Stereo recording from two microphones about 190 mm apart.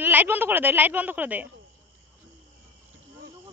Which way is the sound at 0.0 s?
10° right (ahead or behind).